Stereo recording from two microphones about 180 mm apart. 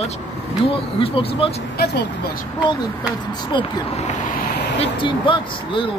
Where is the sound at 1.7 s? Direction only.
65° left (ahead or behind).